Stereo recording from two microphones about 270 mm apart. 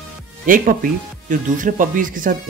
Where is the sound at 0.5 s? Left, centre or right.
Right.